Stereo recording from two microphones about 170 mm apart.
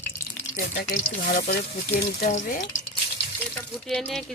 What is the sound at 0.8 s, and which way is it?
Speech, 70° left (ahead or behind).